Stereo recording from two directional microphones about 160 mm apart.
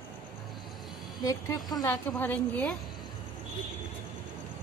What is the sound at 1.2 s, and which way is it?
A woman's voice, 25° left (ahead or behind).